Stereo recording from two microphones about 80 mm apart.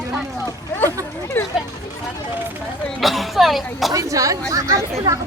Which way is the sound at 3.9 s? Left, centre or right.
Right.